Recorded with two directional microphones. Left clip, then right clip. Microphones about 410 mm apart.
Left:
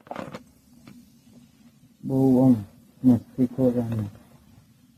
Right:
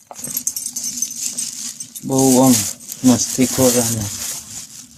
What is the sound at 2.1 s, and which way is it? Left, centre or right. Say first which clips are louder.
Speech: right 7 dB; right.